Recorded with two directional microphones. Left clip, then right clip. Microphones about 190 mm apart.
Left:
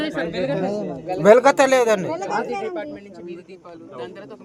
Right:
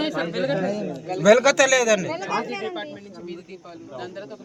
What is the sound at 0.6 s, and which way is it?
A man's voice, 60° left (ahead or behind).